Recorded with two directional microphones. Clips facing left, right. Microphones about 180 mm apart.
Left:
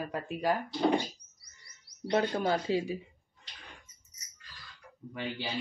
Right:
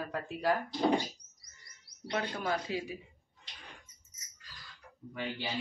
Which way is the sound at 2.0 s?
30° left (ahead or behind).